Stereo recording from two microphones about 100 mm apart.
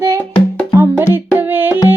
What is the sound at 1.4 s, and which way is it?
Music, 20° right (ahead or behind).